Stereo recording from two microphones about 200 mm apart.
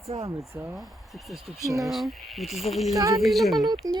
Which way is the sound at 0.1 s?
35° right (ahead or behind).